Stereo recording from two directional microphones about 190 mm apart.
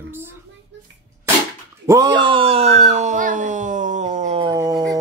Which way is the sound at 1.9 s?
20° right (ahead or behind).